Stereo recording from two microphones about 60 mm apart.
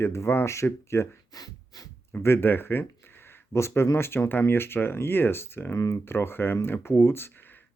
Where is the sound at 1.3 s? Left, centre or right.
Left.